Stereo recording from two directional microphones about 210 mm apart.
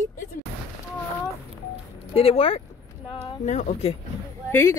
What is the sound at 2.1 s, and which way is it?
Speech, 25° left (ahead or behind).